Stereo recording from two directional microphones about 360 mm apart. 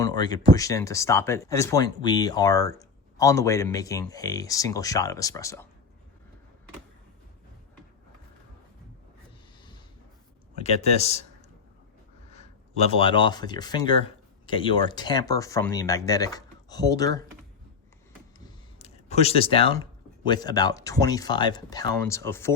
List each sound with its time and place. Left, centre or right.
0.0 s speech: centre
10.6 s speech: centre
12.3 s speech: centre
18.3 s a sound: centre
20.2 s speech: centre